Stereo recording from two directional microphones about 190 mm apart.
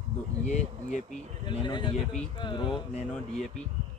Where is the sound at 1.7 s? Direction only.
25° left (ahead or behind).